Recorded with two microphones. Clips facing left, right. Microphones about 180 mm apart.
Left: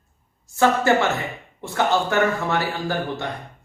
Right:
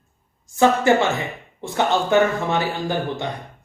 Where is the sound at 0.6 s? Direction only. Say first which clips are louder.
Right 2 dB; 15° right (ahead or behind).